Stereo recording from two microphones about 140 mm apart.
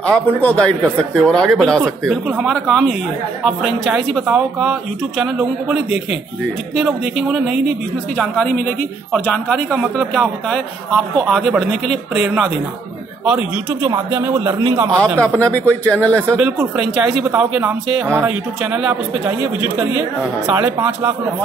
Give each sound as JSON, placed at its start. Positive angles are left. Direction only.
{"t": 0.0, "sound": "a man's voice", "side_deg": 10}
{"t": 2.2, "sound": "a man's voice", "side_deg": -10}
{"t": 2.5, "sound": "a man's voice", "side_deg": 0}
{"t": 8.2, "sound": "a man's voice", "side_deg": 10}
{"t": 15.1, "sound": "a man's voice", "side_deg": 10}
{"t": 16.2, "sound": "a man's voice", "side_deg": -10}
{"t": 20.6, "sound": "a man's voice", "side_deg": -15}